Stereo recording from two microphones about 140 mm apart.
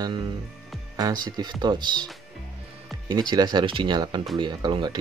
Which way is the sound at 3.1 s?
30° right (ahead or behind).